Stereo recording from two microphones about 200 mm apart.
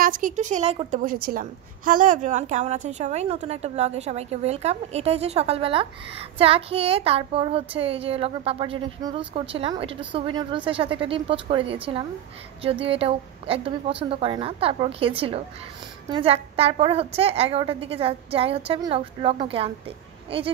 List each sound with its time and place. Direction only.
0.0 s a woman's voice: 40° right (ahead or behind)